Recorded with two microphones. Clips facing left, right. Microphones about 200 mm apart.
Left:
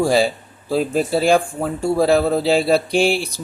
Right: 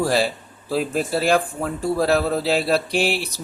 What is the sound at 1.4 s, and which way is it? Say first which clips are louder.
Speech: left 3 dB; 30° left (ahead or behind).